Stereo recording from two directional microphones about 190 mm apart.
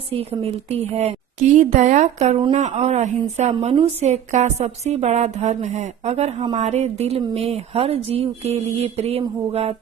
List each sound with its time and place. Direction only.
0.1 s a woman's voice: 30° right (ahead or behind)